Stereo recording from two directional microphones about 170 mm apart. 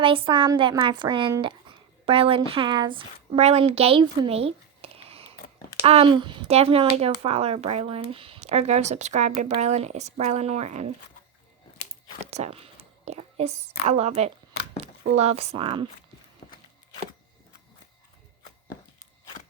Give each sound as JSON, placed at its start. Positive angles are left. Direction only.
{"t": 0.0, "sound": "speech", "side_deg": -30}
{"t": 12.2, "sound": "a woman's voice", "side_deg": -40}